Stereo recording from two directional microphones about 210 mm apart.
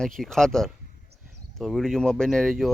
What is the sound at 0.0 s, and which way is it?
Speech, centre (ahead or behind).